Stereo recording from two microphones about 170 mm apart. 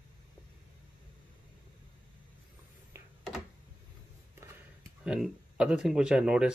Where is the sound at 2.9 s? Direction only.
15° right (ahead or behind).